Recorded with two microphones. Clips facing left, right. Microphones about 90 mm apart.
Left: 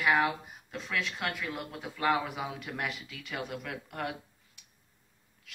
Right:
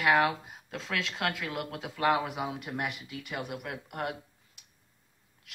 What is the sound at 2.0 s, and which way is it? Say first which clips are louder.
Speech: right 2 dB; 50° right (ahead or behind).